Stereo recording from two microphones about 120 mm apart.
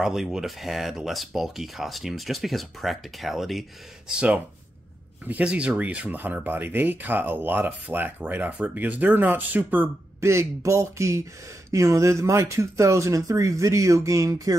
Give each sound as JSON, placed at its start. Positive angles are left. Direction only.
{"t": 0.0, "sound": "speech", "side_deg": -5}
{"t": 5.2, "sound": "speech", "side_deg": -10}